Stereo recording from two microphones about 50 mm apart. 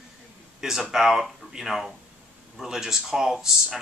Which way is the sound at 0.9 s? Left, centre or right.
Centre.